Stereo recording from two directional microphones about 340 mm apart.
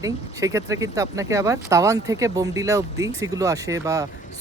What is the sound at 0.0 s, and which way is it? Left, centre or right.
Speech, centre.